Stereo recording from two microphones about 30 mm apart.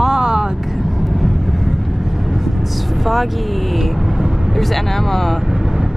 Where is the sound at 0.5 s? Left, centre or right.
Centre.